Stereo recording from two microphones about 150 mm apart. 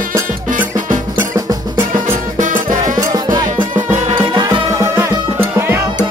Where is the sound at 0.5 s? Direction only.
60° right (ahead or behind).